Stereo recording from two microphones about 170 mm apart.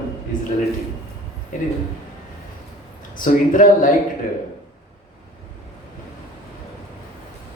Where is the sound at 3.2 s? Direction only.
50° left (ahead or behind).